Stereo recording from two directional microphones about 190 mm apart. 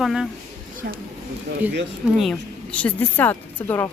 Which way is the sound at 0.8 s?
50° right (ahead or behind).